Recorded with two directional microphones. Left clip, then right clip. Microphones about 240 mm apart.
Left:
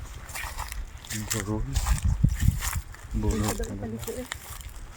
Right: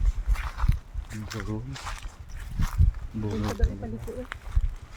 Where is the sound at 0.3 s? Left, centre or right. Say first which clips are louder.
Left 1 dB; left.